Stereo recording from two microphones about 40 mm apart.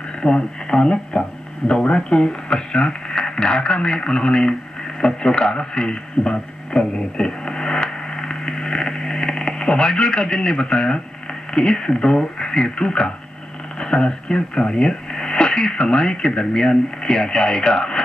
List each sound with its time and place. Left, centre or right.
0.2 s a man's voice: centre